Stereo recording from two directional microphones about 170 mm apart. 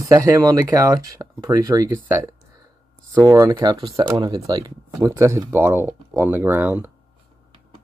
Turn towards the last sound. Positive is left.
turn(degrees=-10)  # may be behind; listen again after turning